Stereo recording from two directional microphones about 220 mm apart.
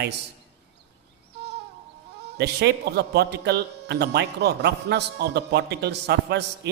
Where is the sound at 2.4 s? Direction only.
50° right (ahead or behind).